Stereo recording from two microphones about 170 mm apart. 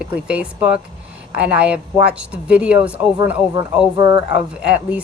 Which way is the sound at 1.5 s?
5° right (ahead or behind).